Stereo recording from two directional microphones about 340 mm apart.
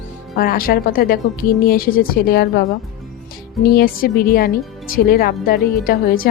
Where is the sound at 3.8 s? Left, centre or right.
Left.